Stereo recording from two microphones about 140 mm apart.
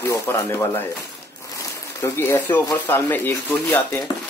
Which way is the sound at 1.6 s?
20° left (ahead or behind).